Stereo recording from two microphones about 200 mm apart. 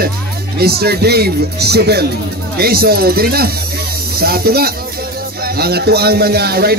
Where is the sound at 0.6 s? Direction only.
50° right (ahead or behind).